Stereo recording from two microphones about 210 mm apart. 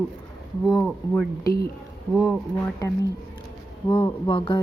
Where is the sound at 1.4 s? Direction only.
45° left (ahead or behind).